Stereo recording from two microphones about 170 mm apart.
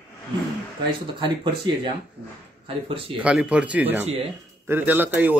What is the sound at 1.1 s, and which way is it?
Speech, 30° right (ahead or behind).